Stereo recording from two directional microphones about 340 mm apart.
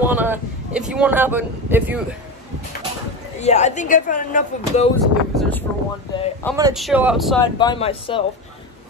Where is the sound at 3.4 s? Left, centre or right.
Centre.